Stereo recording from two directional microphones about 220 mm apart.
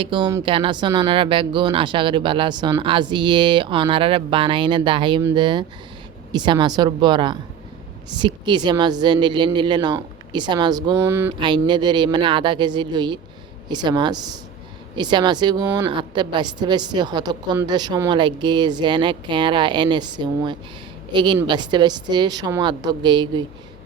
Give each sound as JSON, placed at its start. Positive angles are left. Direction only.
{"t": 0.0, "sound": "a woman's voice", "side_deg": -20}